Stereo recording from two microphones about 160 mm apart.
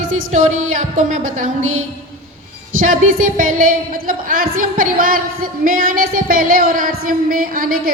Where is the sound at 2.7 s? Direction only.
55° right (ahead or behind).